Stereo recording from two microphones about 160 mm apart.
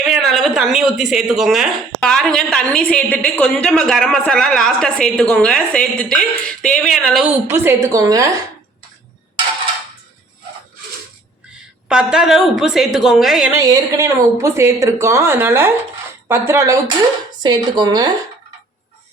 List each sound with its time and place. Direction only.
0.1 s a woman's voice: centre (ahead or behind)
7.5 s a woman's voice: 15° right (ahead or behind)
11.9 s a woman's voice: 5° right (ahead or behind)
13.5 s a woman's voice: 20° right (ahead or behind)